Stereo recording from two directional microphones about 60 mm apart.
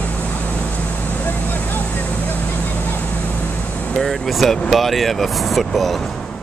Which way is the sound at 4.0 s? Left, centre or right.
Centre.